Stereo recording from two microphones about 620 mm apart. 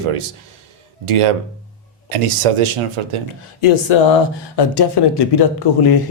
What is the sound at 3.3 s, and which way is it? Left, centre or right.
Speech, left.